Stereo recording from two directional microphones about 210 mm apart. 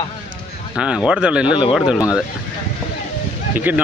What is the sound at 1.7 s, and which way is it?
Speech, 5° right (ahead or behind).